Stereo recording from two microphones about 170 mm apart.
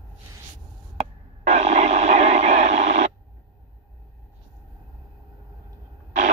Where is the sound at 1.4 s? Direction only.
40° right (ahead or behind).